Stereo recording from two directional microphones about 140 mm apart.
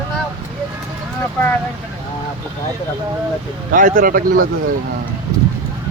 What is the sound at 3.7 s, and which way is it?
Speech, 75° right (ahead or behind).